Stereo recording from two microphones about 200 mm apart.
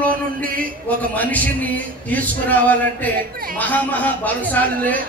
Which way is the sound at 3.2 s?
45° right (ahead or behind).